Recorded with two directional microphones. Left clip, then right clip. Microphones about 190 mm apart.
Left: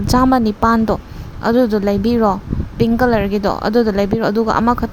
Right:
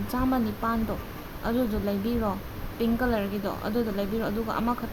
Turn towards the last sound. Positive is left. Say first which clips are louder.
# left 14 dB
turn(degrees=50)  # may be behind; listen again after turning